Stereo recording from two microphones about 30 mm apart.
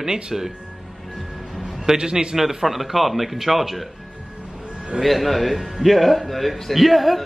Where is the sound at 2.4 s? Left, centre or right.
Centre.